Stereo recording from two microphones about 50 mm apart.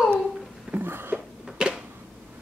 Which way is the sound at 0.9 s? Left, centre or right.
Right.